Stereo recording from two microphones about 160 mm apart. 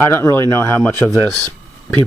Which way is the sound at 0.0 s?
15° left (ahead or behind).